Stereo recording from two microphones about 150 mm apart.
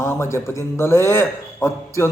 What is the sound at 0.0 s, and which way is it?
Speech, 15° left (ahead or behind).